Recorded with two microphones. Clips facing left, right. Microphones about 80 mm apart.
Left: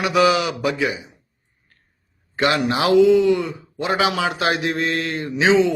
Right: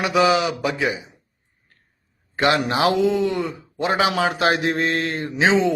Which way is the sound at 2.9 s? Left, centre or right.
Right.